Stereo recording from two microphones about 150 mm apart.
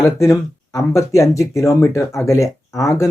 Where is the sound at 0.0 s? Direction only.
20° left (ahead or behind).